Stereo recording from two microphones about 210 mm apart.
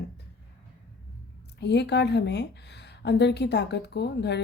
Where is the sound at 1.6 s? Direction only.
55° left (ahead or behind).